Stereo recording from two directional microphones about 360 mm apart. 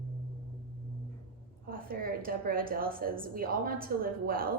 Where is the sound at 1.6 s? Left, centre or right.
Right.